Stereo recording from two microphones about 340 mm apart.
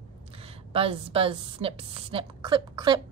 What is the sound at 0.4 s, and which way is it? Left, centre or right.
A woman's voice, centre.